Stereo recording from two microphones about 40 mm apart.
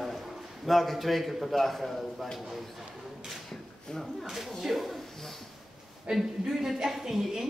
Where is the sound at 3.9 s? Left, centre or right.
Centre.